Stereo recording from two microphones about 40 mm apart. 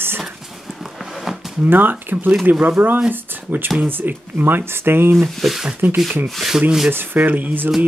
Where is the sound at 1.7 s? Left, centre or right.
Right.